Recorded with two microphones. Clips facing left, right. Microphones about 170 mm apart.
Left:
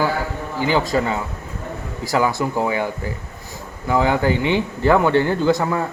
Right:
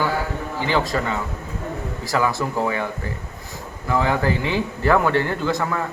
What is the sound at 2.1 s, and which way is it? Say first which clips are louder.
A man's voice: left 2 dB; 25° left (ahead or behind).